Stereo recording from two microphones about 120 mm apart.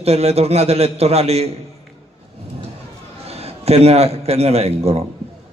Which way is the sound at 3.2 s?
60° right (ahead or behind).